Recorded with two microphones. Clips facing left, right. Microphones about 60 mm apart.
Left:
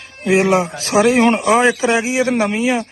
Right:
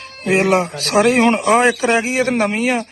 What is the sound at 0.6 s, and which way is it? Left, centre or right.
Speech, left.